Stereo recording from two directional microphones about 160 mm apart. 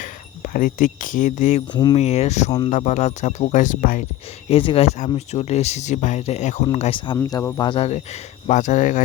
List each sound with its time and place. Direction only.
0.0 s speech: 60° left (ahead or behind)
1.7 s speech: 30° left (ahead or behind)
2.0 s speech: 40° left (ahead or behind); by 4.0 s 55° left (ahead or behind)
4.4 s speech: 35° left (ahead or behind)
7.2 s speech: 25° left (ahead or behind)
7.7 s speech: 40° left (ahead or behind)